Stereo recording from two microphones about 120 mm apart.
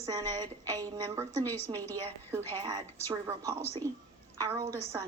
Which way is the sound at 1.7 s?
15° left (ahead or behind).